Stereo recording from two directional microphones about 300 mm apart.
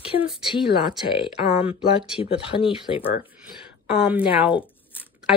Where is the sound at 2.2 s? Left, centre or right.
Centre.